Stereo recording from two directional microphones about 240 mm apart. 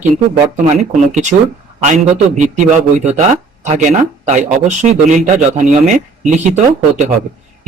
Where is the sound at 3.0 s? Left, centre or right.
Right.